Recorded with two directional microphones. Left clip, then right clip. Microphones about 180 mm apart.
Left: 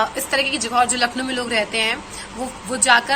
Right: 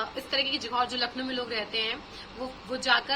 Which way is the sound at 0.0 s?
20° right (ahead or behind).